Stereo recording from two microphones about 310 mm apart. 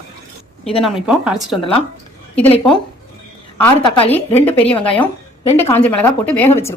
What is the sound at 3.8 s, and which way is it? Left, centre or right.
Speech, centre.